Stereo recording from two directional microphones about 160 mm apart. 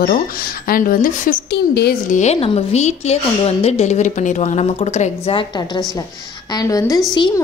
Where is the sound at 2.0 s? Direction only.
50° left (ahead or behind).